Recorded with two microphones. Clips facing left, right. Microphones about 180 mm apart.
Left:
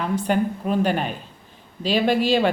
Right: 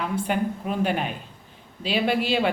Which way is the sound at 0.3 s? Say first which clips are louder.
Left 4 dB; 40° left (ahead or behind).